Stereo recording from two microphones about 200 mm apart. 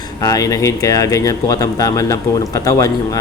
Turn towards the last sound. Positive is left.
turn(degrees=15)  # may be behind; listen again after turning